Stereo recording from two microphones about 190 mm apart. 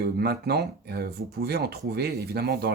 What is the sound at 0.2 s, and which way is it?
Speech, 60° right (ahead or behind).